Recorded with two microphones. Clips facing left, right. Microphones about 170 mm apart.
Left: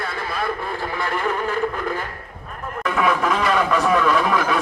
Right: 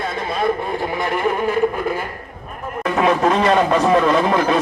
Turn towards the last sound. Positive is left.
turn(degrees=-35)  # may be behind; listen again after turning